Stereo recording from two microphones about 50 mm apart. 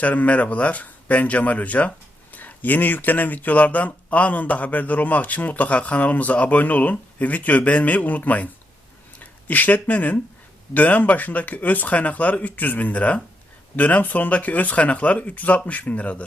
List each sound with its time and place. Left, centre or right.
0.0 s speech: left